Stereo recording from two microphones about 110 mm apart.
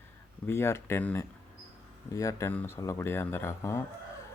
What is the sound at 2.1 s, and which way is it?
Speech, 30° left (ahead or behind).